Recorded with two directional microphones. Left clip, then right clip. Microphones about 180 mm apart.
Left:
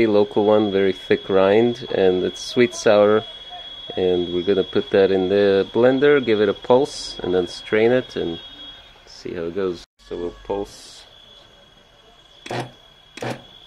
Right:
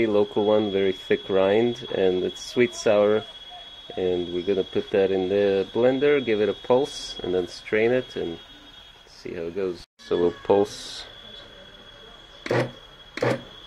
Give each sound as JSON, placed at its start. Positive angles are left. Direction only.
{"t": 0.0, "sound": "speech", "side_deg": 15}
{"t": 10.0, "sound": "speech", "side_deg": -10}